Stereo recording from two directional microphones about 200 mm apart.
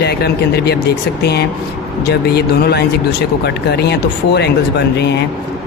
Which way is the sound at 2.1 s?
55° left (ahead or behind).